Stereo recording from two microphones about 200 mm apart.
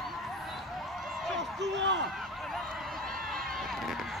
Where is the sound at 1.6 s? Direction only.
60° right (ahead or behind).